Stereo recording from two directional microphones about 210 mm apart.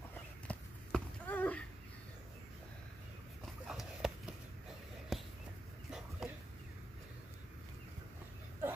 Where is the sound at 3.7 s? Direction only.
Centre (ahead or behind).